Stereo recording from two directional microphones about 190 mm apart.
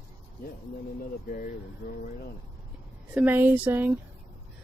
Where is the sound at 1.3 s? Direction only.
45° left (ahead or behind).